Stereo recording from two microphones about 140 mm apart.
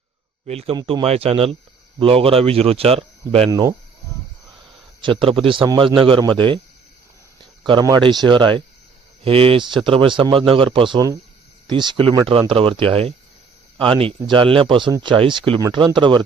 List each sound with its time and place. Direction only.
0.4 s speech: 45° right (ahead or behind)
3.5 s speech: 25° right (ahead or behind)
5.2 s speech: 40° right (ahead or behind)
7.6 s speech: 30° right (ahead or behind)